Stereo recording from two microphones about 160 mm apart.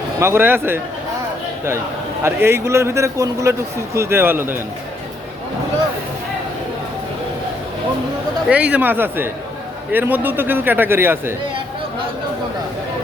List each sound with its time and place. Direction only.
0.2 s a man's voice: 15° right (ahead or behind)
2.2 s a man's voice: 15° right (ahead or behind)
8.4 s a man's voice: 10° right (ahead or behind)